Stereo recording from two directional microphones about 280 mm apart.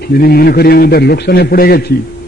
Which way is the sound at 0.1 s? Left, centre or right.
Left.